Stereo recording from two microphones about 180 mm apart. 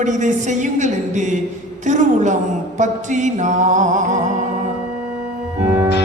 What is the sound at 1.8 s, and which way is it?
Speech, 40° right (ahead or behind).